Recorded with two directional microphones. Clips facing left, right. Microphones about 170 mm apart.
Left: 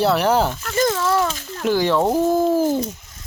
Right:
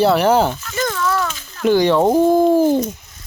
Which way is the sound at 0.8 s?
30° left (ahead or behind).